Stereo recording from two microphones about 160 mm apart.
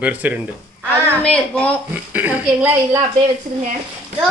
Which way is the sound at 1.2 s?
5° left (ahead or behind).